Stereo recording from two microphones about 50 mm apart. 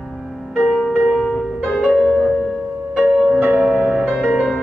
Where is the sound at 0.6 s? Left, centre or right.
Centre.